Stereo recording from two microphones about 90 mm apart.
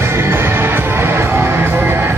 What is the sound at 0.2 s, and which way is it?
Music, 25° right (ahead or behind).